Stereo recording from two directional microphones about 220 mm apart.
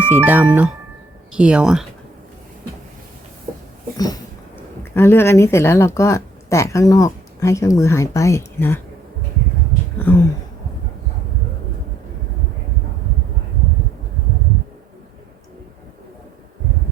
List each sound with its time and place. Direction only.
0.1 s speech: 10° right (ahead or behind)
3.9 s a woman's voice: 15° left (ahead or behind)
10.0 s a woman's voice: 10° left (ahead or behind)